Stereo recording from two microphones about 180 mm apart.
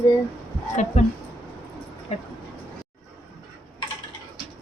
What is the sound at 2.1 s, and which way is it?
Speech, 35° left (ahead or behind).